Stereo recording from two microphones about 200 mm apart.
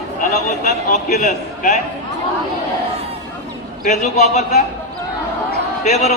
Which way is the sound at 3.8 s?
35° left (ahead or behind).